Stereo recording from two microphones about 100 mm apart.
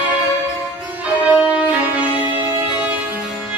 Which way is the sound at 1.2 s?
15° right (ahead or behind).